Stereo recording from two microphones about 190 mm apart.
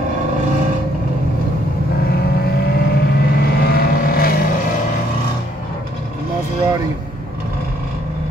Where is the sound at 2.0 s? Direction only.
55° left (ahead or behind).